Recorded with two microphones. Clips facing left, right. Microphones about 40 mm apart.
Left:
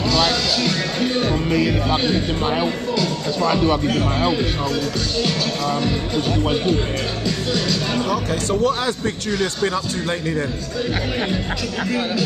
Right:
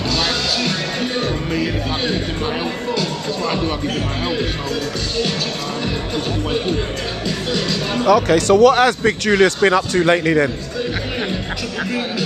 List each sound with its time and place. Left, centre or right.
0.6 s music: centre
2.4 s speech: centre
7.2 s music: centre
8.1 s speech: right
8.7 s a man's voice: right